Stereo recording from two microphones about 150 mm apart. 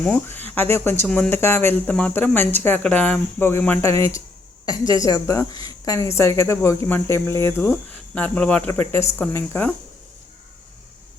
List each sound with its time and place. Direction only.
0.0 s a woman's voice: 10° left (ahead or behind)